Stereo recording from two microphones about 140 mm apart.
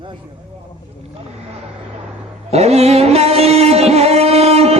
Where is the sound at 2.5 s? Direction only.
50° right (ahead or behind).